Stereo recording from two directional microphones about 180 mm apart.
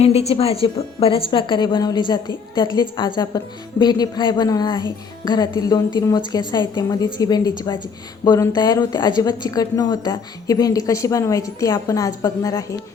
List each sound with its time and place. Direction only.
0.0 s speech: 35° left (ahead or behind); by 12.7 s 20° left (ahead or behind)